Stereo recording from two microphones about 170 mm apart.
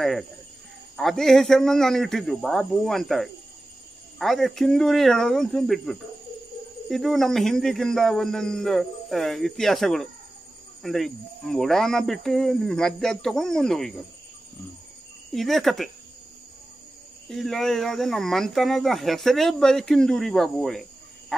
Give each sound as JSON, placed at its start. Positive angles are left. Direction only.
{"t": 0.0, "sound": "speech", "side_deg": 0}
{"t": 15.3, "sound": "speech", "side_deg": 0}
{"t": 17.3, "sound": "speech", "side_deg": 0}
{"t": 21.3, "sound": "frog", "side_deg": 5}